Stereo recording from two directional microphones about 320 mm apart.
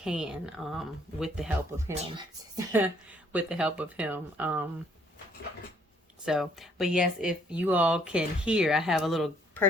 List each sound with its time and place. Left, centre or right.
0.0 s speech: centre
2.0 s speech: centre
2.7 s speech: centre
6.2 s speech: centre